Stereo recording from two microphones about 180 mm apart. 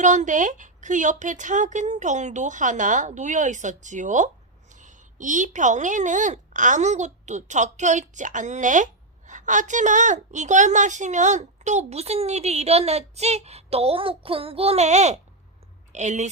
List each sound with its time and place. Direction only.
0.0 s speech: 45° right (ahead or behind)